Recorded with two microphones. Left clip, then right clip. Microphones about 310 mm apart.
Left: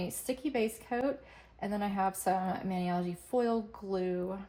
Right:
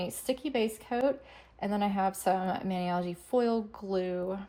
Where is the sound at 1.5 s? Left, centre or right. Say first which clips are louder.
Right 3 dB; right.